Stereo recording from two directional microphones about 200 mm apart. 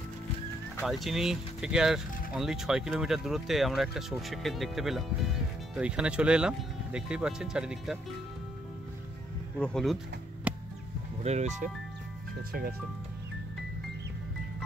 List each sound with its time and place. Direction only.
0.8 s speech: centre (ahead or behind)
9.6 s speech: 5° left (ahead or behind)
10.5 s music: 5° right (ahead or behind)
11.2 s speech: 35° right (ahead or behind)